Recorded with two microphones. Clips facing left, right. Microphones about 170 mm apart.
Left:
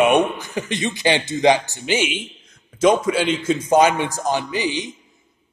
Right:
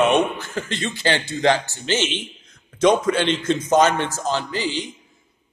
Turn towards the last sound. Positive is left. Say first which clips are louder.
# left 2 dB
turn(degrees=15)  # may be behind; listen again after turning